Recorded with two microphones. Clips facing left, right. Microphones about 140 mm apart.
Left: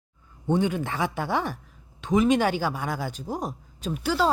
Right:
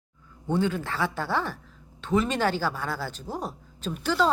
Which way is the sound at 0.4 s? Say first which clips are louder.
Left 2 dB; 15° left (ahead or behind).